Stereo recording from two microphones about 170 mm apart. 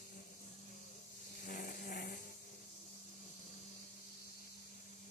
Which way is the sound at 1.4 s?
55° left (ahead or behind).